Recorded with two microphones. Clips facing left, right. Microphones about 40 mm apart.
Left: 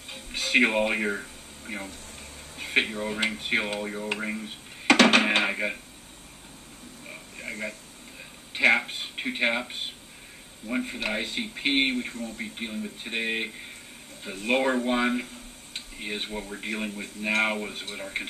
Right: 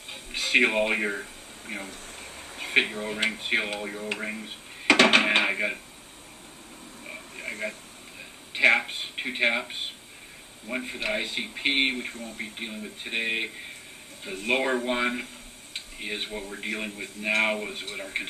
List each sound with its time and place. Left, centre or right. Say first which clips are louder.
0.1 s music: even; centre
2.5 s speech: right 1 dB; centre
8.5 s speech: right 1 dB; centre
12.1 s speech: left 2 dB; right
12.5 s speech: left 2 dB; centre